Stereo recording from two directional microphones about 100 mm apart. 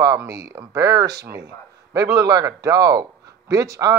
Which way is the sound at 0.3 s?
35° right (ahead or behind).